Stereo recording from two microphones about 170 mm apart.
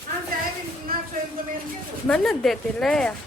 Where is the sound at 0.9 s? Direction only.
60° right (ahead or behind).